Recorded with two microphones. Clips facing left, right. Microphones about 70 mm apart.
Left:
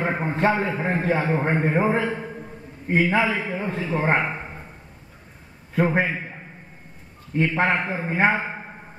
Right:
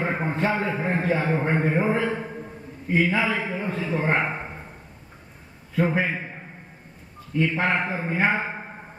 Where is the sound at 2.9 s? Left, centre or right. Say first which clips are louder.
Left 1 dB; left.